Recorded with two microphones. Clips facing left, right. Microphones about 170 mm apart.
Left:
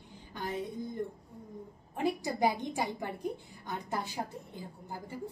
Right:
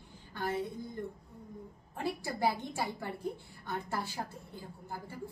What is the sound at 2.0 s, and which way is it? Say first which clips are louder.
A woman's voice: left 4 dB; 20° left (ahead or behind).